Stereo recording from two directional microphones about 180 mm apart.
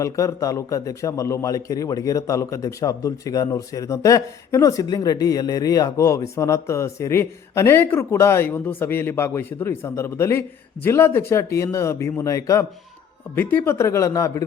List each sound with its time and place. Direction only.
0.0 s a man's voice: 15° left (ahead or behind)